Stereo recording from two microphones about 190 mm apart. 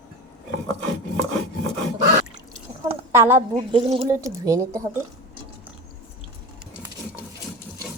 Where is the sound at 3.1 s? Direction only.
15° right (ahead or behind).